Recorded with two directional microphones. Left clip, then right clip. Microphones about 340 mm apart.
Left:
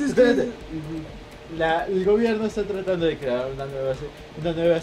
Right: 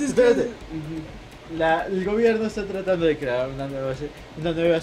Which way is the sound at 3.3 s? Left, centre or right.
Right.